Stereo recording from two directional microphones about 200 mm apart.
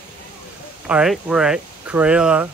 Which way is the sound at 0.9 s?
5° right (ahead or behind).